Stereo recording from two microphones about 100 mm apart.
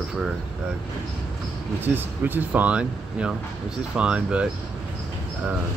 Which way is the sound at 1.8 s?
20° right (ahead or behind).